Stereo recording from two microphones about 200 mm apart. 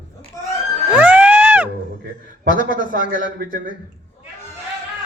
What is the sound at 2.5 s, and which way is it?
Speech, 40° left (ahead or behind).